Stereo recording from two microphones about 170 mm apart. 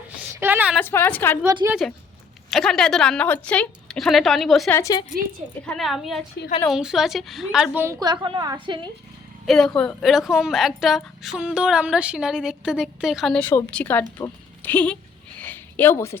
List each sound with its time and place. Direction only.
0.2 s a sound: 10° right (ahead or behind)
0.8 s a woman's voice: 10° left (ahead or behind)
1.5 s a woman's voice: 20° right (ahead or behind)
2.5 s a woman's voice: centre (ahead or behind)
4.7 s a woman's voice: 20° left (ahead or behind)
5.6 s a woman's voice: centre (ahead or behind)
8.0 s a woman's voice: 25° right (ahead or behind)
9.5 s a woman's voice: 5° left (ahead or behind)
15.4 s a sound: 10° left (ahead or behind)